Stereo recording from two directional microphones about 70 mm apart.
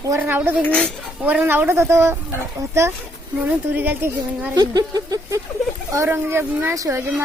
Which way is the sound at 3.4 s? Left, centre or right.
Right.